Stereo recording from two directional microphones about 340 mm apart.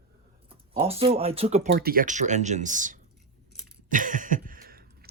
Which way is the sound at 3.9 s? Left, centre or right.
Right.